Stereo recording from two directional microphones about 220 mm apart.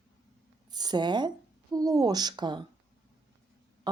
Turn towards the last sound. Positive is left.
turn(degrees=-20)  # may be behind; listen again after turning